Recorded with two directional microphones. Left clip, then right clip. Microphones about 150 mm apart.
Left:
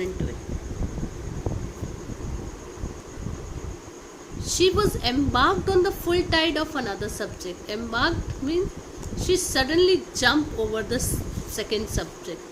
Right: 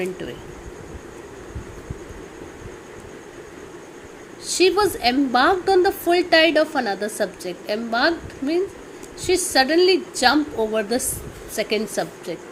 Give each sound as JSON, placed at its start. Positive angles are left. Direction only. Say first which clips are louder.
{"t": 4.4, "sound": "a woman's voice", "louder": "right 4 dB", "side_deg": -20}